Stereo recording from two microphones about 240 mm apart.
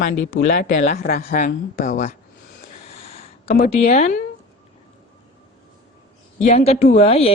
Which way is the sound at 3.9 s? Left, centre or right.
Left.